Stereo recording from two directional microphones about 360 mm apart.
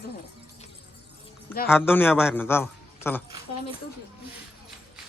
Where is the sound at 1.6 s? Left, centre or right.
Centre.